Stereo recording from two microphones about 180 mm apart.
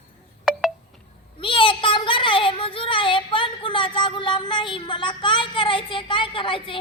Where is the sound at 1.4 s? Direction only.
30° left (ahead or behind).